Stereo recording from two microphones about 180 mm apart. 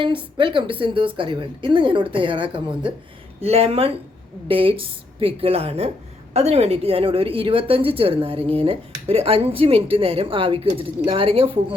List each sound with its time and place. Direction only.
0.3 s a woman's voice: 30° right (ahead or behind)